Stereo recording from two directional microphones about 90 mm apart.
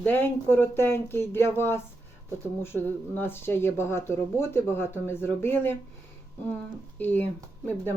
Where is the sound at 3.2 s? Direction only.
25° left (ahead or behind).